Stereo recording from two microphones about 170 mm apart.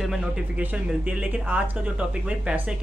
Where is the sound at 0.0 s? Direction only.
5° right (ahead or behind).